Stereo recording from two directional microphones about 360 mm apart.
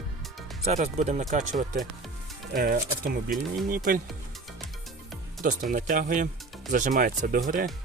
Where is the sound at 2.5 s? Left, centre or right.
Right.